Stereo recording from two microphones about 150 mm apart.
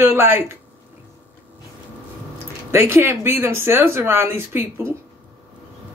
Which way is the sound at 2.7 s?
15° right (ahead or behind).